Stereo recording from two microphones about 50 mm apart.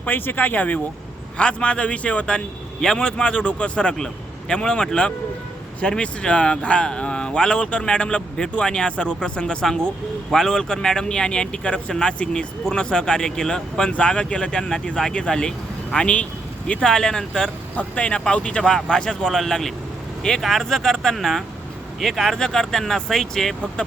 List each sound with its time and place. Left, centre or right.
0.0 s speech: left
1.4 s speech: left
16.8 s speech: centre
17.7 s speech: left
18.6 s speech: centre